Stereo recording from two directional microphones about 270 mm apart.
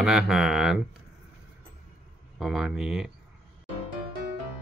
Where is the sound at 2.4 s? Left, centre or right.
Centre.